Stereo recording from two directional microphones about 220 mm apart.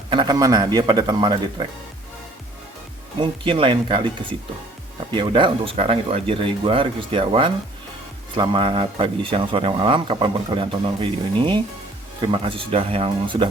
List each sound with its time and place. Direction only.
0.1 s speech: 20° right (ahead or behind)
3.2 s speech: 25° right (ahead or behind)
12.3 s speech: 25° right (ahead or behind)